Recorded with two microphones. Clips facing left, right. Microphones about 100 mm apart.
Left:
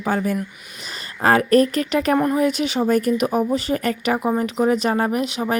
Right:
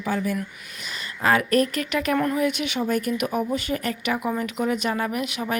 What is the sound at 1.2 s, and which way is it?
Speech, 40° left (ahead or behind).